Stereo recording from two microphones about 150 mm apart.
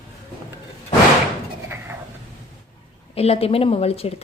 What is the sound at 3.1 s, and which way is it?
Speech, 40° left (ahead or behind).